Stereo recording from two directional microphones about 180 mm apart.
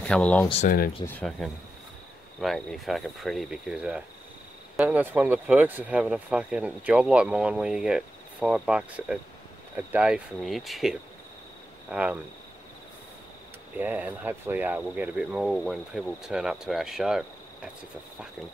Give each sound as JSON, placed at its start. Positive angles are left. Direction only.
{"t": 0.0, "sound": "speech", "side_deg": 5}
{"t": 0.7, "sound": "speech", "side_deg": 55}
{"t": 1.0, "sound": "speech", "side_deg": 5}
{"t": 13.7, "sound": "speech", "side_deg": -10}